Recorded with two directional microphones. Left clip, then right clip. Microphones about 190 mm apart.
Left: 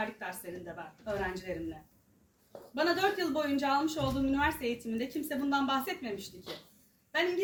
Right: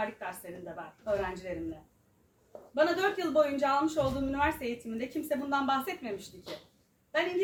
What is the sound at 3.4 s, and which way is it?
A woman's voice, 15° right (ahead or behind).